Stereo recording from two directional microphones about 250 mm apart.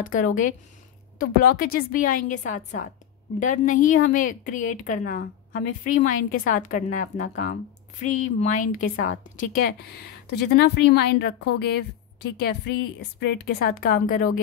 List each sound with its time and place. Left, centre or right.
0.0 s a woman's voice: left
8.9 s a woman's voice: left
9.4 s a woman's voice: left